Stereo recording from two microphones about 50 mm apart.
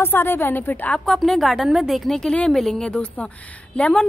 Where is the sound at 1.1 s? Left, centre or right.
Centre.